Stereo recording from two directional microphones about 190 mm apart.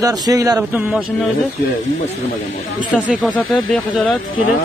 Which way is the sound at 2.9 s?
Centre (ahead or behind).